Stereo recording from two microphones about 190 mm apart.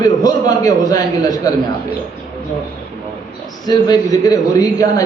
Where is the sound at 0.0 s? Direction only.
20° left (ahead or behind).